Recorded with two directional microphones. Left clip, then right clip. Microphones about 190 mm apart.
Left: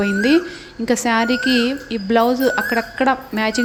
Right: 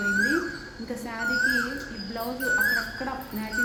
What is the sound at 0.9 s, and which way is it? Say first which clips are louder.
Speech: left 19 dB; 45° left (ahead or behind).